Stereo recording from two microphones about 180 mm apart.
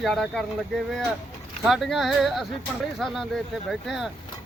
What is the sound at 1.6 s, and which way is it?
Speech, centre (ahead or behind).